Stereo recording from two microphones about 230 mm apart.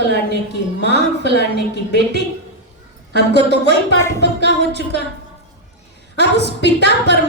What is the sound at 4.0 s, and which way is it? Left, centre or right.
Speech, centre.